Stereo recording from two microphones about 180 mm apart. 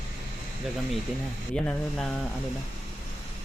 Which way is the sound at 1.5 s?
5° left (ahead or behind).